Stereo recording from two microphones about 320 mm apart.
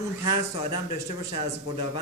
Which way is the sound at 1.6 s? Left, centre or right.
Left.